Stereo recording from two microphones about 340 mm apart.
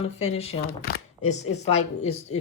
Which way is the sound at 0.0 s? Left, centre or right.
Centre.